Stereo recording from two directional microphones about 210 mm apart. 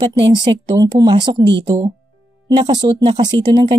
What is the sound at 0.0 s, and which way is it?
Speech, 20° right (ahead or behind).